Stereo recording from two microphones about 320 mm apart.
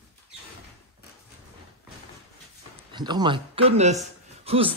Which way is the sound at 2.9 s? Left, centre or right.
Centre.